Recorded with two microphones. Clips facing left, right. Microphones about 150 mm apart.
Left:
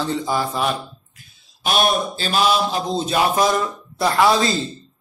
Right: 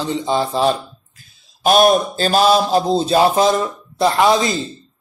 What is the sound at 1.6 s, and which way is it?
Mantra, 40° right (ahead or behind).